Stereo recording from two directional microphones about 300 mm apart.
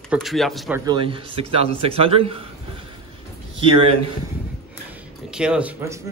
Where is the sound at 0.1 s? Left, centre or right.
Centre.